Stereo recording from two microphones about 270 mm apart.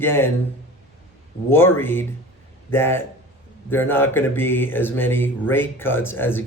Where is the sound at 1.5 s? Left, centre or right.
Centre.